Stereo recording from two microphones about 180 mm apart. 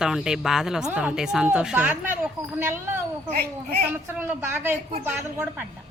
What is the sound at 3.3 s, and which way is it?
Speech, 60° right (ahead or behind).